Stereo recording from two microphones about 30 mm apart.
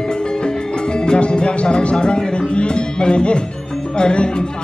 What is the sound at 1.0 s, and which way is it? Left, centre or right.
Music, left.